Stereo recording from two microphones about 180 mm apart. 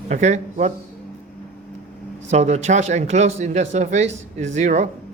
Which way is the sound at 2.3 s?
40° right (ahead or behind).